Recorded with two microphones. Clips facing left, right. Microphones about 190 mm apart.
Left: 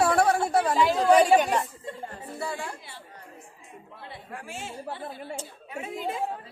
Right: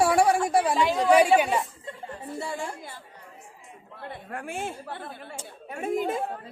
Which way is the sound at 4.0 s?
55° right (ahead or behind).